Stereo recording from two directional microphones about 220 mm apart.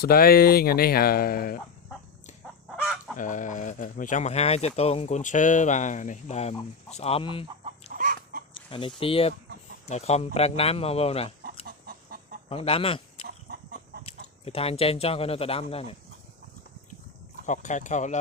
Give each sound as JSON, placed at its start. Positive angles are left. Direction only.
{"t": 0.0, "sound": "speech", "side_deg": 45}
{"t": 2.6, "sound": "chicken", "side_deg": 0}
{"t": 3.2, "sound": "speech", "side_deg": 35}
{"t": 7.9, "sound": "chicken", "side_deg": -40}
{"t": 9.0, "sound": "a man's voice", "side_deg": 25}
{"t": 11.6, "sound": "chicken", "side_deg": -40}
{"t": 12.5, "sound": "speech", "side_deg": 25}
{"t": 13.2, "sound": "chicken", "side_deg": -45}
{"t": 14.4, "sound": "a man's voice", "side_deg": 25}
{"t": 17.4, "sound": "speech", "side_deg": 35}